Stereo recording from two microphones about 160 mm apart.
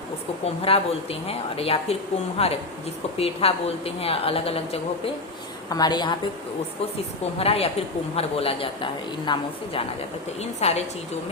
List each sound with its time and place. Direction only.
0.4 s a woman's voice: 40° left (ahead or behind)
5.6 s a woman's voice: 25° left (ahead or behind)
7.3 s a woman's voice: 35° left (ahead or behind)
10.6 s a woman's voice: 40° left (ahead or behind)